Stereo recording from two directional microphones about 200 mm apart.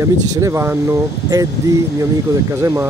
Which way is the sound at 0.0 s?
15° right (ahead or behind).